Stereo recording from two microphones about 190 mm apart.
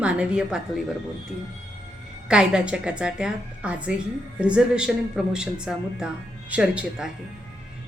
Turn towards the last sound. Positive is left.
turn(degrees=-5)  # may be behind; listen again after turning